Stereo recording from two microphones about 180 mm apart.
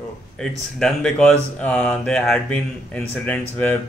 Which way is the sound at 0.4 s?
5° left (ahead or behind).